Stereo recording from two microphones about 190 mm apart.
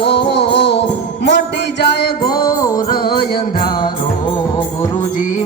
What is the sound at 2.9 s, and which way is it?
Music, 50° left (ahead or behind).